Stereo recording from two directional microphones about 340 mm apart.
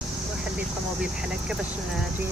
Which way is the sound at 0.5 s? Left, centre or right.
Centre.